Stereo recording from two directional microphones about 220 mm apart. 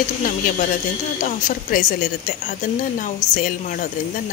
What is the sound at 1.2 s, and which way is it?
Speech, 40° left (ahead or behind).